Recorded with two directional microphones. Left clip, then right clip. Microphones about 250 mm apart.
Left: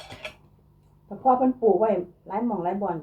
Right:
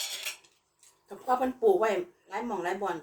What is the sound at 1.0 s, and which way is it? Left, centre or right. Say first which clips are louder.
Speech: left 8 dB; centre.